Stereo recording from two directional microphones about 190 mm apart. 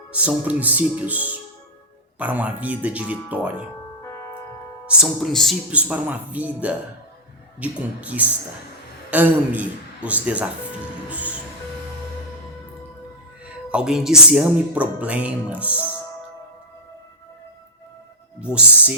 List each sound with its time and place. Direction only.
0.1 s speech: 5° right (ahead or behind)
4.9 s speech: centre (ahead or behind)
11.1 s music: 10° right (ahead or behind)
13.7 s speech: 5° right (ahead or behind)
18.3 s speech: 5° right (ahead or behind)